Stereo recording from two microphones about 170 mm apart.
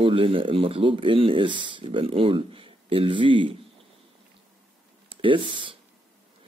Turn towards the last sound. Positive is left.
turn(degrees=-30)  # may be behind; listen again after turning